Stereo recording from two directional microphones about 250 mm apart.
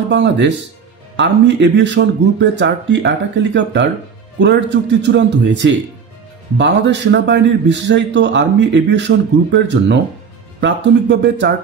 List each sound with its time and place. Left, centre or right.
0.1 s a man's voice: right